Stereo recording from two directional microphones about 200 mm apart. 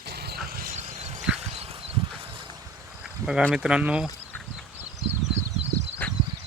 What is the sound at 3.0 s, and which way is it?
Cricket, 5° right (ahead or behind).